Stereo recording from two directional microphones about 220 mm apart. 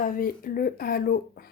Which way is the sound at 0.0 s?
40° left (ahead or behind).